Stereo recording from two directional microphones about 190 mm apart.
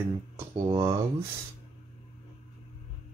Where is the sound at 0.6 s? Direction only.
20° right (ahead or behind).